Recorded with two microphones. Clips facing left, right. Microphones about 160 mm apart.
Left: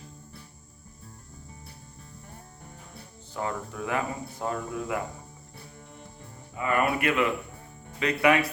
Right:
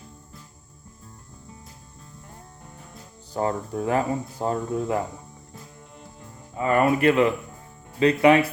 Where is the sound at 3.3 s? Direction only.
35° right (ahead or behind).